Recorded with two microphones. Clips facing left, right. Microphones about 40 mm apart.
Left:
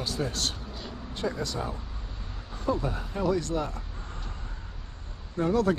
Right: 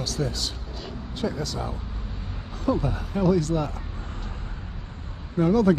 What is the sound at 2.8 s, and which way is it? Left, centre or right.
Speech, right.